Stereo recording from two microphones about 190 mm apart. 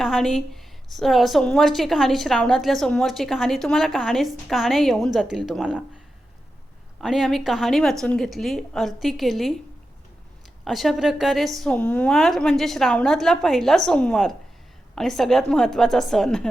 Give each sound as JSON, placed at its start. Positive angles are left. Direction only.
{"t": 0.0, "sound": "a woman's voice", "side_deg": 0}
{"t": 7.0, "sound": "a woman's voice", "side_deg": 0}
{"t": 10.6, "sound": "a woman's voice", "side_deg": 0}